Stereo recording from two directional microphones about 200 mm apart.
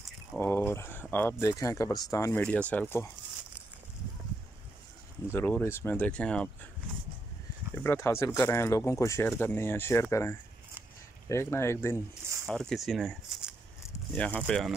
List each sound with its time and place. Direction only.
0.4 s speech: 10° left (ahead or behind)
5.3 s speech: 10° left (ahead or behind)
7.7 s speech: 10° left (ahead or behind)
12.4 s speech: centre (ahead or behind)